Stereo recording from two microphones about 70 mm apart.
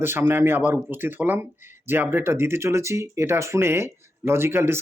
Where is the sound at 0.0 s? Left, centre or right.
Right.